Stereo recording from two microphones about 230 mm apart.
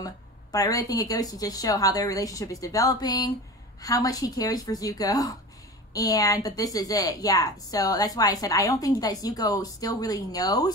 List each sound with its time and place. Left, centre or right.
0.0 s a woman's voice: centre